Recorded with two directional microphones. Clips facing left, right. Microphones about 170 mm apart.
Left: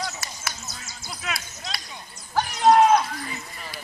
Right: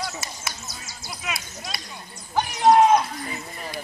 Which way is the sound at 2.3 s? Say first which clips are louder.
Right 1 dB; 15° right (ahead or behind).